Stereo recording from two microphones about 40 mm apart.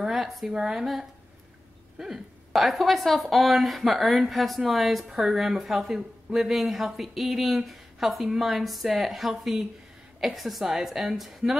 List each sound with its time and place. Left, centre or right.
0.0 s a sound: centre
0.5 s a woman's voice: centre
2.0 s a woman's voice: centre